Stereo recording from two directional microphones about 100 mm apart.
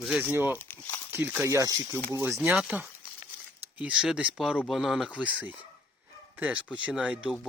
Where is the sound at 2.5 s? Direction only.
10° right (ahead or behind).